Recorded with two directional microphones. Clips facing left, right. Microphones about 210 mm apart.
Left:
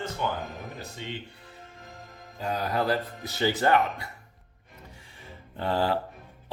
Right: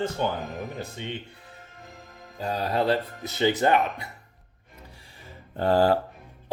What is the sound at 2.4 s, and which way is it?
Speech, 30° right (ahead or behind).